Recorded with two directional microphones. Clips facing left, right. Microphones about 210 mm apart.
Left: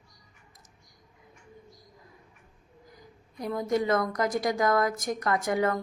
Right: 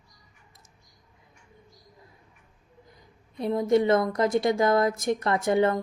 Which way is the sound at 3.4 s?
25° right (ahead or behind).